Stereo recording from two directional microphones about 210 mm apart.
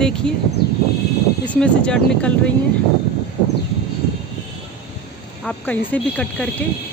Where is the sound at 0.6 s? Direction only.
50° left (ahead or behind).